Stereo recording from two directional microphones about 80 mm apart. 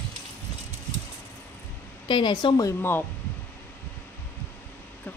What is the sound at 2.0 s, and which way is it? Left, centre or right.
Speech, left.